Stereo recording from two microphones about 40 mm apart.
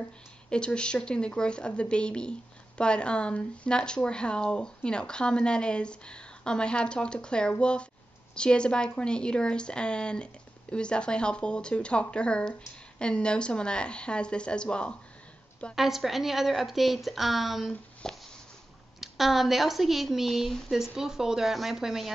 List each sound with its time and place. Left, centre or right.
0.5 s speech: left
15.7 s speech: centre
18.0 s a sound: centre
18.9 s speech: centre
20.7 s speech: centre